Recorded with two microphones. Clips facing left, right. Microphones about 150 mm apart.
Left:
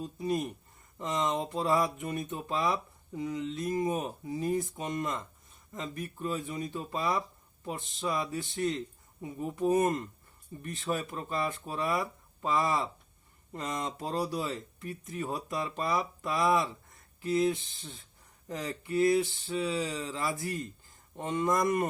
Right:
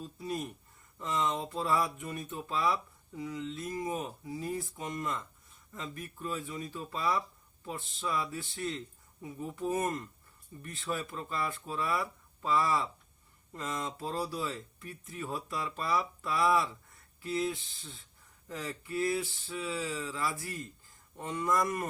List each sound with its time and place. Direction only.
0.0 s speech: 20° left (ahead or behind)